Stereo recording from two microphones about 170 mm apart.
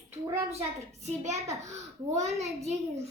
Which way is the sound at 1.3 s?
15° right (ahead or behind).